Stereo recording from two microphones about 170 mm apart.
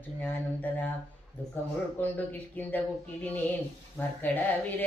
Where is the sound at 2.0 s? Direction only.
10° left (ahead or behind).